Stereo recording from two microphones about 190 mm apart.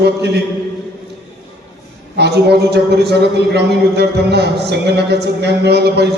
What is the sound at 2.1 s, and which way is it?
A man's voice, 60° right (ahead or behind).